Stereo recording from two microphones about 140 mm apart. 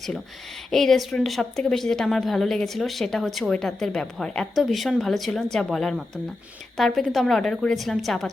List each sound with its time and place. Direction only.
0.7 s a woman's voice: centre (ahead or behind)